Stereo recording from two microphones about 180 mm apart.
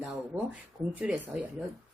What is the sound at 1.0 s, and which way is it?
Speech, 5° right (ahead or behind).